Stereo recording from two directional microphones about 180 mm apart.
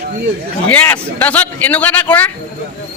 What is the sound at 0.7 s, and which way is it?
A man's voice, 10° left (ahead or behind).